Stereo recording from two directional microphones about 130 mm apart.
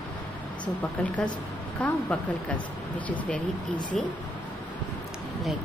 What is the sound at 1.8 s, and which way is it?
Speech, 10° left (ahead or behind).